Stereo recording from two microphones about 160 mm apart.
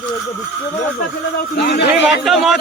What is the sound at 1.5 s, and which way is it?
Speech, 90° left.